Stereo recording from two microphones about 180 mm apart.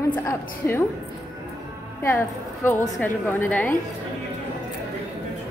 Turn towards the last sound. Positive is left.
turn(degrees=10)  # may be behind; listen again after turning